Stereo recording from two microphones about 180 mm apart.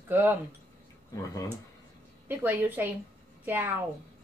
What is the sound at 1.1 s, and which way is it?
Speech, 20° left (ahead or behind).